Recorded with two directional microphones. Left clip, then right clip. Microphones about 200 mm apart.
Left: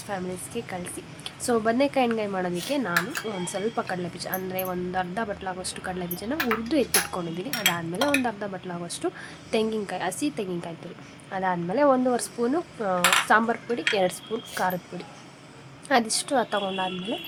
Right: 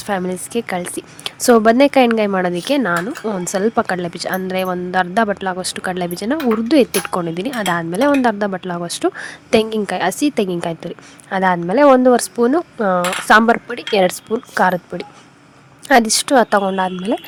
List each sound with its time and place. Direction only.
0.0 s speech: 45° right (ahead or behind)